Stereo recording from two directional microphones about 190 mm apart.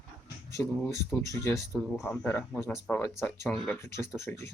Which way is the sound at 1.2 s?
15° left (ahead or behind).